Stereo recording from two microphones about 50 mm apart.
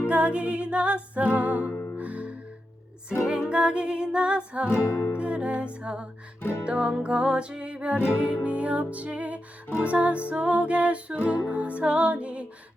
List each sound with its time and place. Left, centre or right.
0.1 s music: right
1.6 s music: left
2.0 s music: right
3.5 s music: right
6.4 s music: left
6.7 s music: right